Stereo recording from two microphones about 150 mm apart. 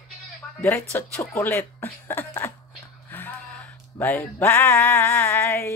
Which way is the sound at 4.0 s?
15° left (ahead or behind).